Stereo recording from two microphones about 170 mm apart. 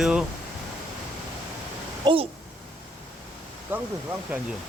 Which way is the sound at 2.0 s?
30° right (ahead or behind).